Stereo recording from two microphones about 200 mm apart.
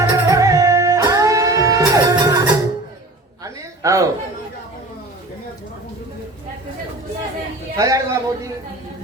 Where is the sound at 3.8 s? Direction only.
15° right (ahead or behind).